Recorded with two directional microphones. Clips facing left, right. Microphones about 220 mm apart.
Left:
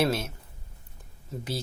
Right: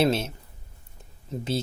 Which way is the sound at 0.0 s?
25° right (ahead or behind).